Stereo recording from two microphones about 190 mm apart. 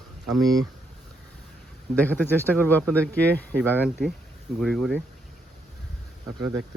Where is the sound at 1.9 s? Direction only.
10° left (ahead or behind).